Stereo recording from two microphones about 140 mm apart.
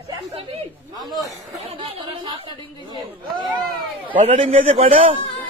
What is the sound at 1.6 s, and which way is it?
Chatter, 40° right (ahead or behind).